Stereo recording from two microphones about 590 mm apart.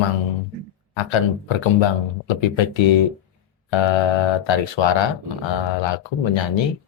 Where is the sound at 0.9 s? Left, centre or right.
Left.